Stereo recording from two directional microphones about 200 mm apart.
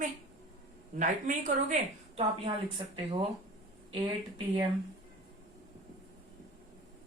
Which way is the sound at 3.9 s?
25° right (ahead or behind).